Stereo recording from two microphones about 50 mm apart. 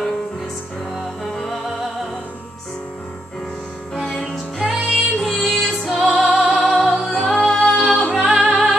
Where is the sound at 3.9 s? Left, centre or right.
Centre.